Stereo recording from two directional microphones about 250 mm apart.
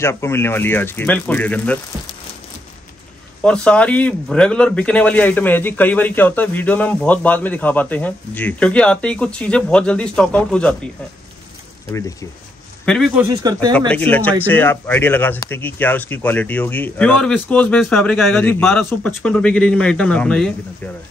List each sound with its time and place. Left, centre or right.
0.0 s speech: centre
3.4 s a man's voice: centre
12.8 s a man's voice: centre
13.2 s speech: centre
13.7 s speech: centre